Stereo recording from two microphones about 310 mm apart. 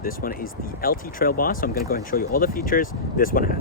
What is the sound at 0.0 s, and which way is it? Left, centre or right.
Speech, left.